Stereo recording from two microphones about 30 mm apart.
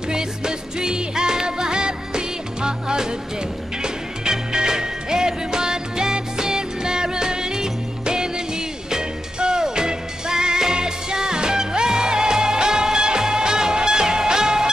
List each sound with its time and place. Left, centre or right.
0.1 s music: right